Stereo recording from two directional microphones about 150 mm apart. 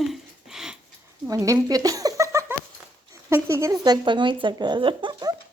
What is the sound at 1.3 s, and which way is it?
Speech, 20° right (ahead or behind).